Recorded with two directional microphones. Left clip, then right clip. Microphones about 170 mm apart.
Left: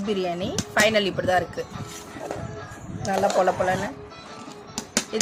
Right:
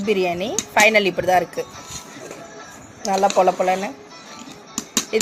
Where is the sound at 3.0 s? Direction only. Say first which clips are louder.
Right 4 dB; 15° right (ahead or behind).